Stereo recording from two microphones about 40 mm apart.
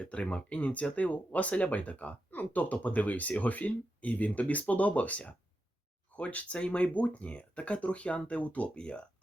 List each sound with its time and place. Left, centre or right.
0.0 s speech: left